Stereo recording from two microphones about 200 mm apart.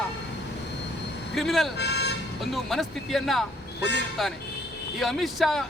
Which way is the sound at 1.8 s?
55° left (ahead or behind).